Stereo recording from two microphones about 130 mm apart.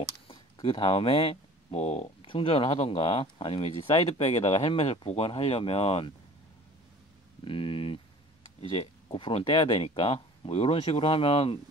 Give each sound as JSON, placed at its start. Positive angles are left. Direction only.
{"t": 0.3, "sound": "speech", "side_deg": 45}
{"t": 2.2, "sound": "speech", "side_deg": 45}
{"t": 4.1, "sound": "speech", "side_deg": 55}
{"t": 7.4, "sound": "speech", "side_deg": 45}